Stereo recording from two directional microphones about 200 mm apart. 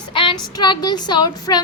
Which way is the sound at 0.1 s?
25° left (ahead or behind).